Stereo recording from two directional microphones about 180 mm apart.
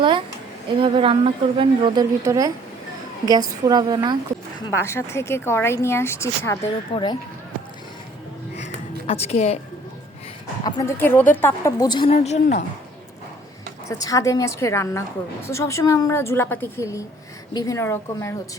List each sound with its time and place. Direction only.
0.0 s a woman's voice: 25° right (ahead or behind)
4.7 s speech: 15° left (ahead or behind)
6.9 s speech: 25° left (ahead or behind)
9.0 s a woman's voice: 35° left (ahead or behind)
10.6 s speech: 20° left (ahead or behind)
12.1 s a woman's voice: 40° left (ahead or behind)
13.8 s speech: 20° left (ahead or behind)